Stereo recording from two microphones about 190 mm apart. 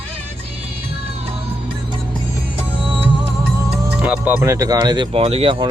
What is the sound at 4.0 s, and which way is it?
Speech, 5° right (ahead or behind).